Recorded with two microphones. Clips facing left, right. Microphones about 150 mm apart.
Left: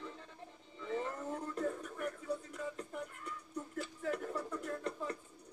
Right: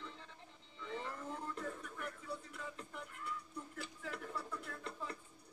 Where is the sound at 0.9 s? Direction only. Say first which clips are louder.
Left 6 dB; 40° left (ahead or behind).